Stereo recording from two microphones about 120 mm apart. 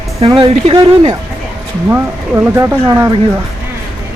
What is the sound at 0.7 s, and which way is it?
Speech, 50° right (ahead or behind).